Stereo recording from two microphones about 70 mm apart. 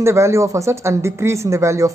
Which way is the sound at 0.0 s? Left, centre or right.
Right.